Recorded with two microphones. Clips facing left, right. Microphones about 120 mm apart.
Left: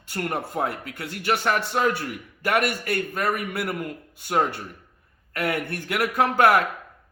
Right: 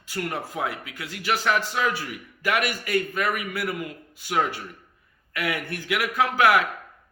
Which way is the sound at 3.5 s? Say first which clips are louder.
Left 1 dB; 55° left (ahead or behind).